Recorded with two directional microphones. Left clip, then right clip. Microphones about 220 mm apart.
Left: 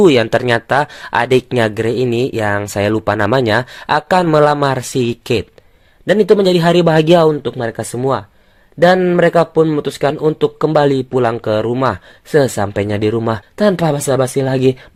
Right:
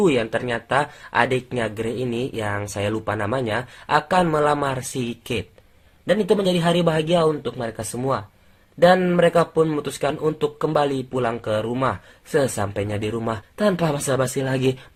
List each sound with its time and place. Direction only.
0.0 s speech: 45° left (ahead or behind); by 14.8 s 30° left (ahead or behind)